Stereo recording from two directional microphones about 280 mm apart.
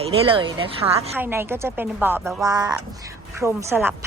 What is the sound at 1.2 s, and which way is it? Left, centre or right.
A woman's voice, centre.